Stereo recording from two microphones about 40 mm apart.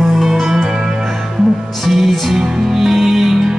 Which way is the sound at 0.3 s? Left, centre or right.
Centre.